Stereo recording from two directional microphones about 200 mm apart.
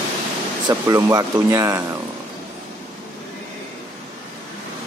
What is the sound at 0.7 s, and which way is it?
Speech, 15° right (ahead or behind).